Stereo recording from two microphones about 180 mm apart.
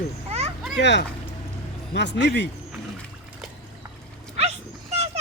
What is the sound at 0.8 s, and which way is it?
Speech, 75° left (ahead or behind).